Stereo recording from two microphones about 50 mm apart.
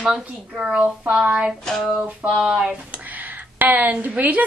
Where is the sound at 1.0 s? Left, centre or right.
Right.